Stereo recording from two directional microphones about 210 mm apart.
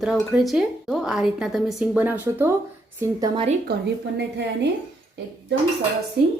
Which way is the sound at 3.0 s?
20° right (ahead or behind).